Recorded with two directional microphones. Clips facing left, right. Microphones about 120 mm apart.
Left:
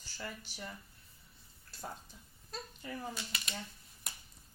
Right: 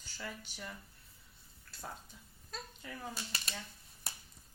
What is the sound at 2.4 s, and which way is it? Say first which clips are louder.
Speech: left 3 dB; 5° left (ahead or behind).